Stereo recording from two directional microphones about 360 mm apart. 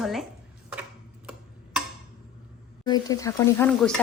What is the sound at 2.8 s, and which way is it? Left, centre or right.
Speech, centre.